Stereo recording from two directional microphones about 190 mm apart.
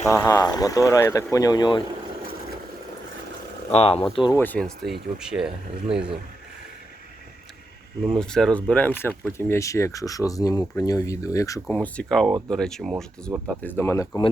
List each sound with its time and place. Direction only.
0.0 s speech: 15° left (ahead or behind)
3.7 s speech: 30° left (ahead or behind)
4.4 s speech: 10° left (ahead or behind)
8.1 s speech: 5° left (ahead or behind)